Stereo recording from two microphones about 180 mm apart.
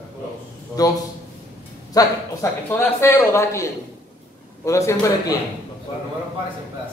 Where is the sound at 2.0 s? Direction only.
20° left (ahead or behind).